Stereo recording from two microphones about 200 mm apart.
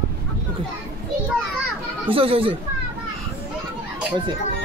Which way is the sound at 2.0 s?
30° right (ahead or behind).